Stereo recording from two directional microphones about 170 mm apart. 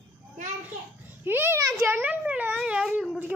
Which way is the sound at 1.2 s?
10° right (ahead or behind).